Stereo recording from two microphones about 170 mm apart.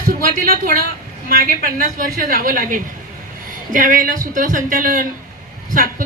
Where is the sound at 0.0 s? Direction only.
55° right (ahead or behind).